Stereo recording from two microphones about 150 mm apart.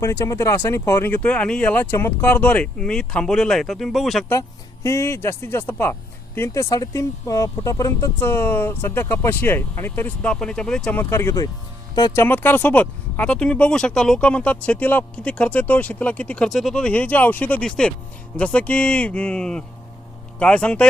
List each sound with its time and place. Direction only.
0.0 s speech: 20° left (ahead or behind); by 4.3 s centre (ahead or behind)
4.3 s speech: 20° left (ahead or behind)
11.1 s speech: 20° left (ahead or behind)